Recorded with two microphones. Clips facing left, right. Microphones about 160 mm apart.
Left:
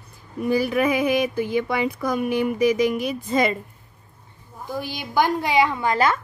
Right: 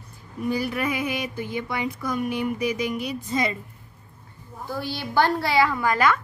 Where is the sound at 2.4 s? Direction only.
80° left.